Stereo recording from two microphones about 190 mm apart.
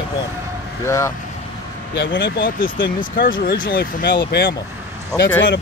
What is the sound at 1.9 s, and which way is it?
Speech, 70° left (ahead or behind).